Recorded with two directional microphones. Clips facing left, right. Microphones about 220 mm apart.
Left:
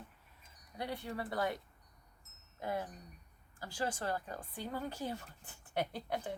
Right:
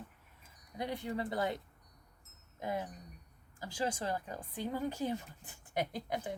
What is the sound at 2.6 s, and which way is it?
A woman's voice, 15° right (ahead or behind).